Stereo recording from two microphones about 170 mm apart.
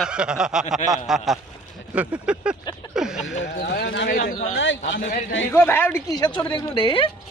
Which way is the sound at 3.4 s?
85° left.